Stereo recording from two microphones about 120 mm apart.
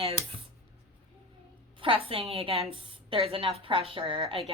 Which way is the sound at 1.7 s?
50° right (ahead or behind).